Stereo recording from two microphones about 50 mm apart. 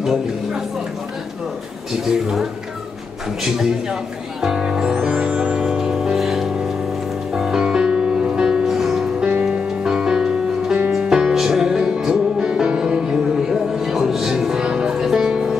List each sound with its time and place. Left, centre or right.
1.9 s speech: centre
3.4 s a man's voice: centre
4.4 s music: centre
9.2 s music: right